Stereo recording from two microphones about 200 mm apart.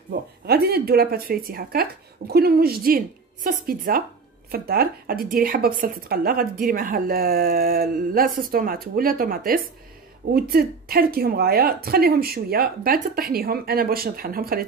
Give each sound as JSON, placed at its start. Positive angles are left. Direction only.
{"t": 0.1, "sound": "speech", "side_deg": -50}